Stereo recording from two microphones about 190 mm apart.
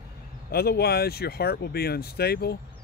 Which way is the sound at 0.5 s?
55° left (ahead or behind).